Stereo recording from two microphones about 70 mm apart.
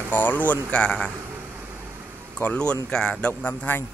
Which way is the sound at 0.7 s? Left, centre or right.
Centre.